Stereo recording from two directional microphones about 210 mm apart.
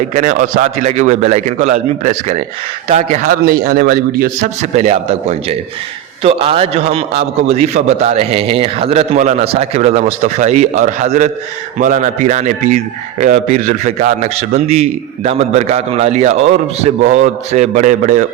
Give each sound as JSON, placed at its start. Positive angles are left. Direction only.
{"t": 0.1, "sound": "a man's voice", "side_deg": -40}
{"t": 3.4, "sound": "a man's voice", "side_deg": -45}